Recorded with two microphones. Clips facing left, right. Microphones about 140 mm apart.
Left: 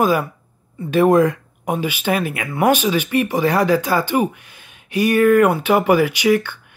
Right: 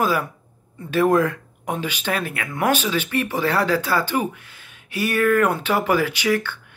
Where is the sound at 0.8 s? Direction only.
15° left (ahead or behind).